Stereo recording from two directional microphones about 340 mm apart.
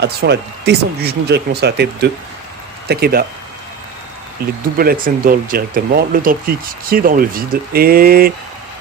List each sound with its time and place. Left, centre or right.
0.0 s speech: right
4.4 s speech: right